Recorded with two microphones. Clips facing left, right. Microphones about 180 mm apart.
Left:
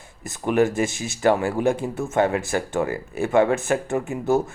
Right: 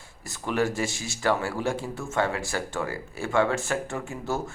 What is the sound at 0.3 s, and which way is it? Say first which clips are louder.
Speech: left 7 dB; 20° left (ahead or behind).